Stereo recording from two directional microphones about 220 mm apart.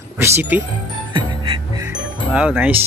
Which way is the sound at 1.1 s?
20° right (ahead or behind).